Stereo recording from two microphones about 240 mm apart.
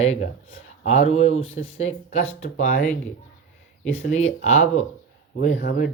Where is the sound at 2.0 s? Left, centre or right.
Left.